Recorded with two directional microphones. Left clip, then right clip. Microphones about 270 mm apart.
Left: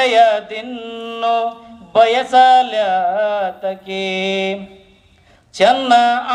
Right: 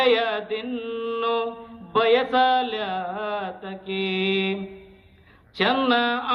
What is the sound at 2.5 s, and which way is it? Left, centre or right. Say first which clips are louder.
Mantra: left 11 dB; left.